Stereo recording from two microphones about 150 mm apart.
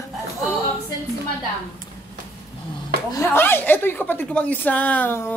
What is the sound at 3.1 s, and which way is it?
A woman's voice, 15° left (ahead or behind).